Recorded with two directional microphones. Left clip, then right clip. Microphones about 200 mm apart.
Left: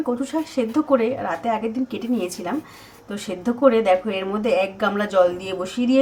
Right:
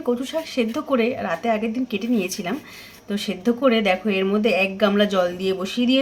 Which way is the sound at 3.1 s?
30° right (ahead or behind).